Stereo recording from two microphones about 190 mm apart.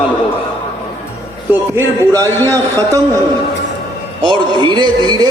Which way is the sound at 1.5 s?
15° right (ahead or behind).